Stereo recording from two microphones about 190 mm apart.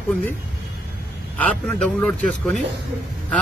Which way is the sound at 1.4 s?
5° left (ahead or behind).